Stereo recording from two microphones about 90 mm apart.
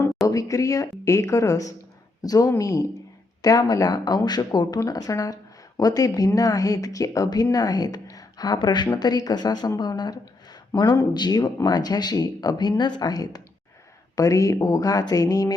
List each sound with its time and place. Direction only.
0.3 s speech: 40° left (ahead or behind)
4.8 s speech: 40° left (ahead or behind)